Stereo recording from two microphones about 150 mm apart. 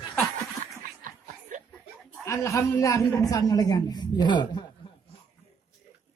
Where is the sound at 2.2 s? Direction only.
20° left (ahead or behind).